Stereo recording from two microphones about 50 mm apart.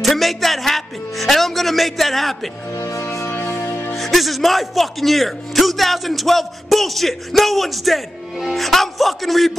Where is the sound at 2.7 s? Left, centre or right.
Left.